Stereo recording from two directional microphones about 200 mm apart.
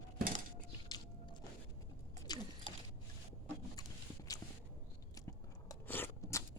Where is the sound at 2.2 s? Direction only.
20° left (ahead or behind).